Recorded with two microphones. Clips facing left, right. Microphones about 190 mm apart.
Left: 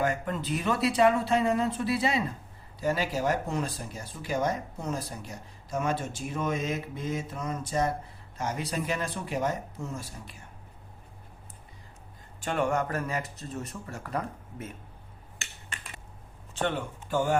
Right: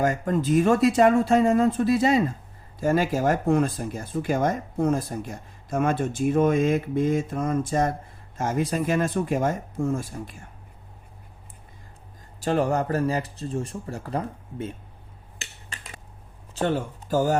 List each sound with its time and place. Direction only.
0.0 s speech: 45° right (ahead or behind)
12.4 s speech: 35° right (ahead or behind)
16.6 s speech: 40° right (ahead or behind)